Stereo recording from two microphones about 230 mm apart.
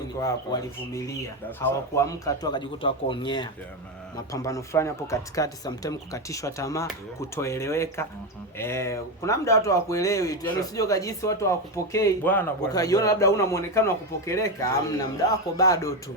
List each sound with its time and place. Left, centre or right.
0.2 s speech: centre